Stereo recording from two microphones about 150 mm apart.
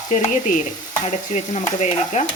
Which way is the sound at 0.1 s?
60° left (ahead or behind).